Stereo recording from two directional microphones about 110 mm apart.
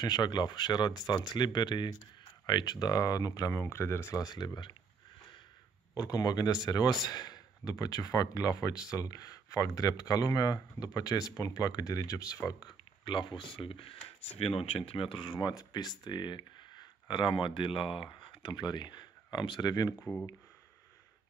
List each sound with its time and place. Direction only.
0.0 s speech: 40° left (ahead or behind)
5.9 s speech: 35° left (ahead or behind)
12.6 s speech: 45° left (ahead or behind)